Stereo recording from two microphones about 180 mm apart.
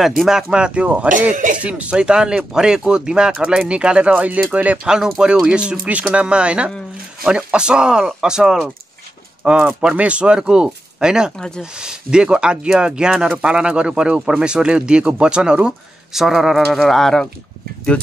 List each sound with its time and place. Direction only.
0.2 s speech: 5° right (ahead or behind)
1.3 s speech: 45° right (ahead or behind)
1.6 s speech: 5° right (ahead or behind)